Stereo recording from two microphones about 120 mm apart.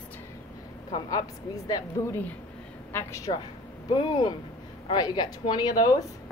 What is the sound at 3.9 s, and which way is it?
A woman's voice, 35° left (ahead or behind).